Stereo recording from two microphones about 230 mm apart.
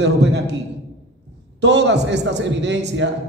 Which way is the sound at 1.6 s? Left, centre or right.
Right.